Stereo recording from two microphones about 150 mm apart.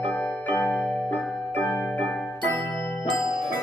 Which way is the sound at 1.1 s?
10° left (ahead or behind).